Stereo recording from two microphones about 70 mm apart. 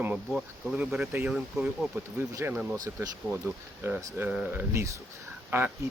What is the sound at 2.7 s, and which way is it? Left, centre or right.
Speech, right.